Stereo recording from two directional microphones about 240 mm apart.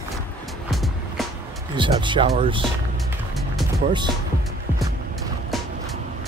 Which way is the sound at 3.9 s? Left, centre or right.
Centre.